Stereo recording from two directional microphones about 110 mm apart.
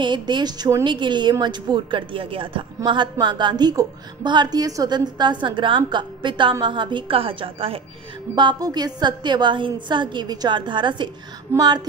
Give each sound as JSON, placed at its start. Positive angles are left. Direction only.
{"t": 0.0, "sound": "a woman's voice", "side_deg": -45}
{"t": 8.4, "sound": "a woman's voice", "side_deg": -40}